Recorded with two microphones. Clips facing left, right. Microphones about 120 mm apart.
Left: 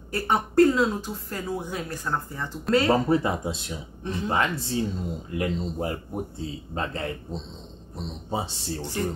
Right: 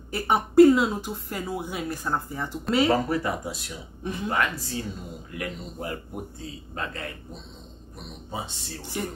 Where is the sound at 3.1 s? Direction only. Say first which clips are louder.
Left 4 dB; 25° left (ahead or behind).